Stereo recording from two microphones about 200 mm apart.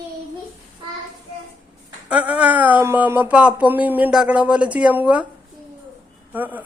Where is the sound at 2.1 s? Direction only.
5° right (ahead or behind).